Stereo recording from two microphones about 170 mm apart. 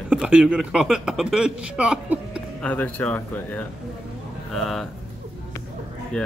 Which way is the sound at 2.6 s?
10° left (ahead or behind).